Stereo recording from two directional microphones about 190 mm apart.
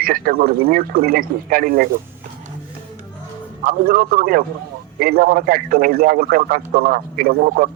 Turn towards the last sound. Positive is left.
turn(degrees=-50)  # may be behind; listen again after turning